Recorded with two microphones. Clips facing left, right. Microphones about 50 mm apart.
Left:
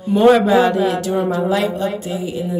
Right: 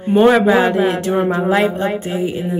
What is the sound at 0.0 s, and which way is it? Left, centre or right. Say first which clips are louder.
Speech: right 1 dB; right.